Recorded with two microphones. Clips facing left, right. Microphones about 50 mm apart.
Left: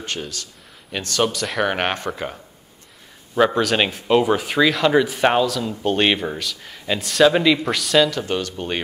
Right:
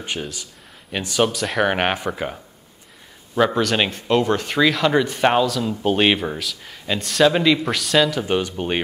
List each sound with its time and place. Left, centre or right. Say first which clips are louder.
0.0 s speech: right 1 dB; centre
8.3 s speech: right 3 dB; centre